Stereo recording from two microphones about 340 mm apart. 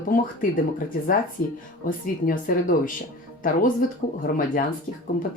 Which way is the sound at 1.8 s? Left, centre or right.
Left.